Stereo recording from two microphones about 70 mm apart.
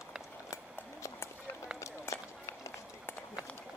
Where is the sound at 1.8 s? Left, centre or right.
Left.